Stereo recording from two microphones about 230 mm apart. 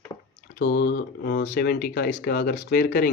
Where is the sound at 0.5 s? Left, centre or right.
Left.